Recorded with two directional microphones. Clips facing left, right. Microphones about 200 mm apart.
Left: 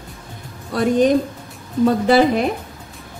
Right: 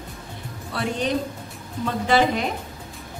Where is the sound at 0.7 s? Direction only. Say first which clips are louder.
Left 10 dB; 45° left (ahead or behind).